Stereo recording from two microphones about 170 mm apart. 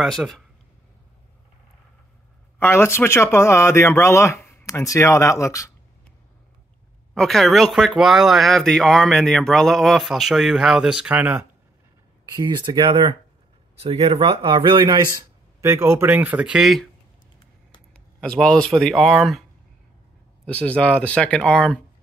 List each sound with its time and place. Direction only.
0.0 s speech: centre (ahead or behind)
2.6 s speech: 15° left (ahead or behind)
7.2 s speech: centre (ahead or behind)
12.4 s speech: 25° right (ahead or behind); by 16.8 s centre (ahead or behind)
17.9 s speech: 5° left (ahead or behind)
20.4 s speech: 5° left (ahead or behind)